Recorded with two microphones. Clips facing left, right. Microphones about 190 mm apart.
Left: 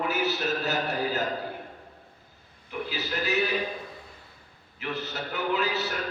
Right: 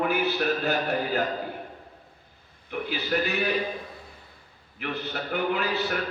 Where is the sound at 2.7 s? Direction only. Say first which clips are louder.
Right 4 dB; 60° right (ahead or behind).